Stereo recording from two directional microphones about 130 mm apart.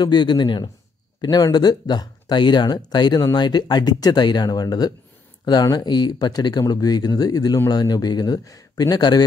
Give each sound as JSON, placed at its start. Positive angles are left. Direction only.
{"t": 0.0, "sound": "speech", "side_deg": 35}